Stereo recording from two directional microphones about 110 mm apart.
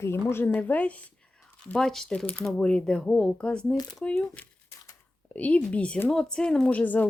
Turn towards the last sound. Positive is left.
turn(degrees=15)  # may be behind; listen again after turning